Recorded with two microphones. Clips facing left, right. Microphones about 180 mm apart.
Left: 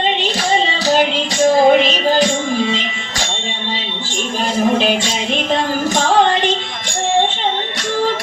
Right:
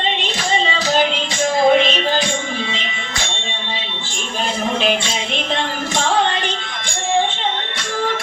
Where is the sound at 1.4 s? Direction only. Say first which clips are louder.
Left 4 dB; 35° left (ahead or behind).